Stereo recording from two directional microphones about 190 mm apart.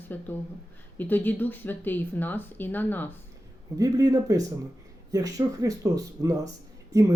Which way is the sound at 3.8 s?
20° right (ahead or behind).